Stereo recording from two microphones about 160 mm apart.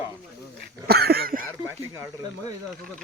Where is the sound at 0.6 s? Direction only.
80° right.